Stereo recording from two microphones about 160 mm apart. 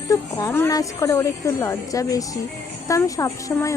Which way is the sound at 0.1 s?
20° left (ahead or behind).